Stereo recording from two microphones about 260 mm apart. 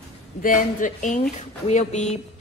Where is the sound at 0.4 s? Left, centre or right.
Left.